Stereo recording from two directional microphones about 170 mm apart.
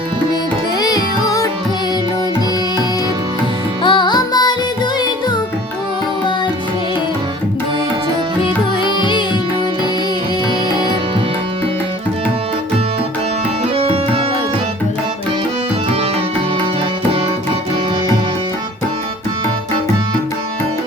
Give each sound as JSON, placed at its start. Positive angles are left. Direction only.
{"t": 0.8, "sound": "music", "side_deg": 25}
{"t": 3.8, "sound": "music", "side_deg": 25}
{"t": 8.8, "sound": "music", "side_deg": 25}
{"t": 13.7, "sound": "music", "side_deg": -35}